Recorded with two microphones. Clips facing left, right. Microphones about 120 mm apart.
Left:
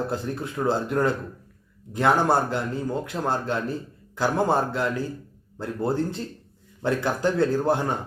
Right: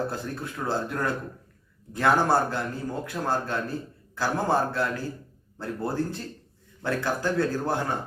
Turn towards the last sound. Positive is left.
turn(degrees=20)  # may be behind; listen again after turning